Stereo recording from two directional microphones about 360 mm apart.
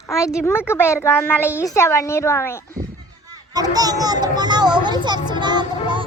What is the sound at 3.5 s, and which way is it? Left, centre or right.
Children playing, centre.